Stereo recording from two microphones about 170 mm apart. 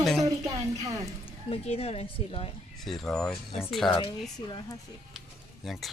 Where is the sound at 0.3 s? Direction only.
20° right (ahead or behind).